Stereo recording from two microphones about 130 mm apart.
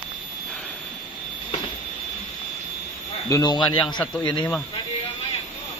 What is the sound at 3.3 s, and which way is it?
Speech, 25° left (ahead or behind).